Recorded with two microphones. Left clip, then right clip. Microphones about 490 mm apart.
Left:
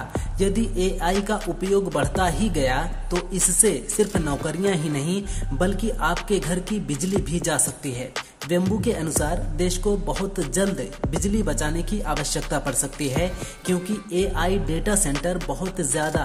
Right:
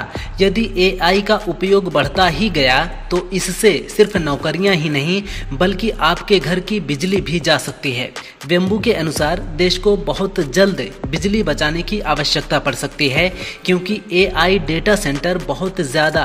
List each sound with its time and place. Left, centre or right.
0.4 s speech: left